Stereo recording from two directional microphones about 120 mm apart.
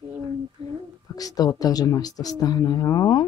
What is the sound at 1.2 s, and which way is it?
Speech, 30° left (ahead or behind).